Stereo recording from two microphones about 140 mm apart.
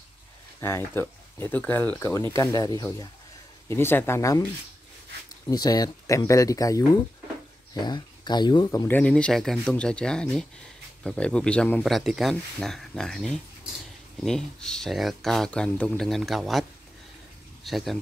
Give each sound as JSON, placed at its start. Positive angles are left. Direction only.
{"t": 0.6, "sound": "speech", "side_deg": 20}
{"t": 5.5, "sound": "speech", "side_deg": 25}
{"t": 7.8, "sound": "speech", "side_deg": 30}
{"t": 8.8, "sound": "speech", "side_deg": 10}
{"t": 17.6, "sound": "speech", "side_deg": 0}